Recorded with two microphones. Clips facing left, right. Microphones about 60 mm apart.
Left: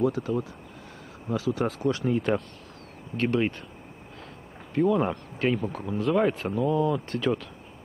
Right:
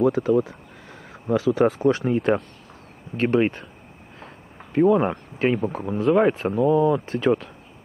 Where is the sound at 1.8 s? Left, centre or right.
Right.